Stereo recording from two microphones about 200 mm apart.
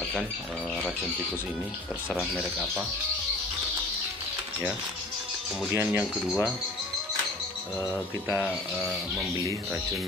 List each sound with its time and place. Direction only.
2.0 s speech: centre (ahead or behind)
5.7 s speech: 5° right (ahead or behind)
7.8 s speech: 10° right (ahead or behind)